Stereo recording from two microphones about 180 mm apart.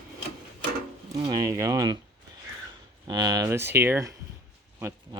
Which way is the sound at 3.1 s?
20° right (ahead or behind).